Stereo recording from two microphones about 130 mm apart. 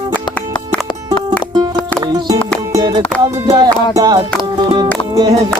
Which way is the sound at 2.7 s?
30° right (ahead or behind).